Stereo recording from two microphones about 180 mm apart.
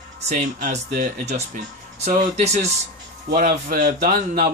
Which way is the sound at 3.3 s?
55° right (ahead or behind).